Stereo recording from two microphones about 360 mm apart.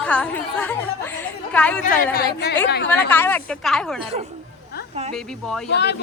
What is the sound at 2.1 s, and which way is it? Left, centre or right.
Speech, left.